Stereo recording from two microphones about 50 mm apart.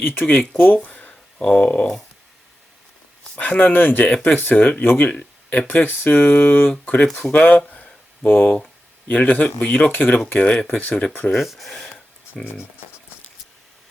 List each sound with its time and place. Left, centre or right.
0.1 s speech: left
0.9 s a sound: left
1.5 s speech: left
3.2 s speech: left
11.3 s speech: centre